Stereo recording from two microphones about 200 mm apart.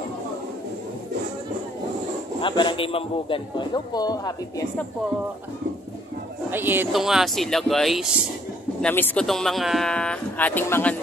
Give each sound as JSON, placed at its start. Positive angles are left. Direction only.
{"t": 2.4, "sound": "a man's voice", "side_deg": 25}
{"t": 6.5, "sound": "speech", "side_deg": -10}